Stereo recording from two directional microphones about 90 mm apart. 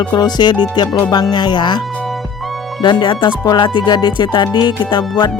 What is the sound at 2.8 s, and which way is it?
Speech, 55° left (ahead or behind).